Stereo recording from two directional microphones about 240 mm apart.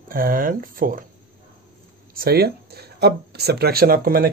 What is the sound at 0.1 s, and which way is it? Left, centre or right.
Speech, right.